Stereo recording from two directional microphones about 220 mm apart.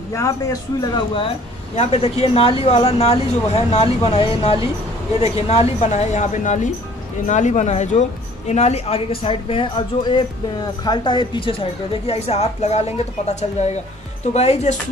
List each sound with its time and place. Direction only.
0.1 s a man's voice: 15° left (ahead or behind)